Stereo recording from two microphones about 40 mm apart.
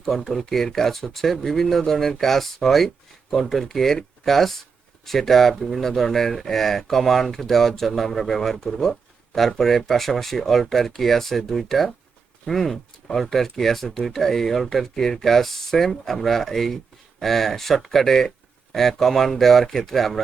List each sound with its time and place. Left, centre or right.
0.0 s speech: centre